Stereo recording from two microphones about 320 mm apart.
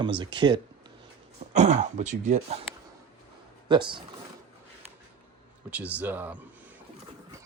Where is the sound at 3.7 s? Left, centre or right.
Centre.